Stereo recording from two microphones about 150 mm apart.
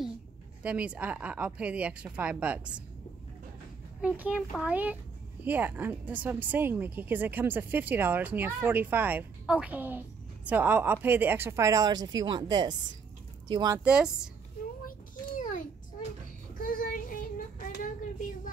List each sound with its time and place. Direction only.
0.6 s speech: 10° right (ahead or behind)
4.0 s speech: 10° right (ahead or behind); by 13.7 s 25° right (ahead or behind)
13.8 s speech: 5° right (ahead or behind)
14.9 s a sound: 60° left (ahead or behind)
16.5 s child singing: 65° left (ahead or behind)